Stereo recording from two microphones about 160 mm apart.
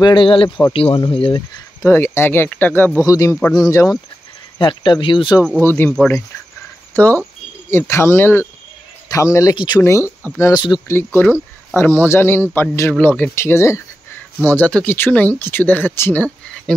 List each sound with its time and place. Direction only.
0.0 s speech: 30° left (ahead or behind)
1.9 s a man's voice: 15° left (ahead or behind); by 5.4 s 30° left (ahead or behind)
5.6 s speech: 15° left (ahead or behind)